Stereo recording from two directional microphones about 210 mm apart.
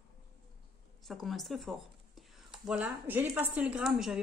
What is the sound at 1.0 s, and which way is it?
A woman's voice, centre (ahead or behind).